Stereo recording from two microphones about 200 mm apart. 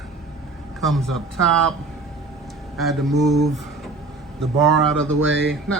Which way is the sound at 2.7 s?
Centre (ahead or behind).